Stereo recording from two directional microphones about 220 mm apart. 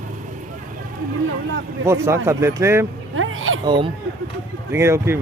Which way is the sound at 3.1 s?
65° right (ahead or behind).